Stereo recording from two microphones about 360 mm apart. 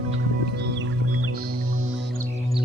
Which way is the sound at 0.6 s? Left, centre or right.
Right.